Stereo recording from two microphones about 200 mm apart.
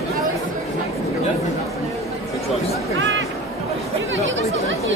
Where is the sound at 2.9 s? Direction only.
75° right (ahead or behind).